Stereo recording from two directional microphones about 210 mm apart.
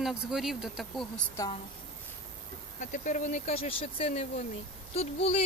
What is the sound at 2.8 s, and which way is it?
Speech, 35° left (ahead or behind).